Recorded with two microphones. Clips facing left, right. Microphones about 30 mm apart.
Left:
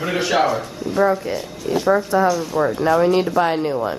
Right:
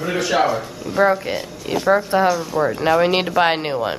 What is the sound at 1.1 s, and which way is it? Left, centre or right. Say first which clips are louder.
Speech: right 1 dB; right.